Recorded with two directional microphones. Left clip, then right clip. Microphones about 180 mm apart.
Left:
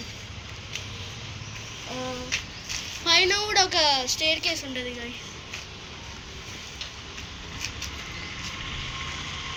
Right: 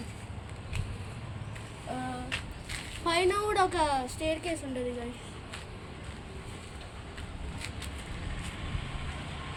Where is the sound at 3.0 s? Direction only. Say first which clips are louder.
Left 6 dB; 70° right (ahead or behind); by 4.6 s 50° right (ahead or behind).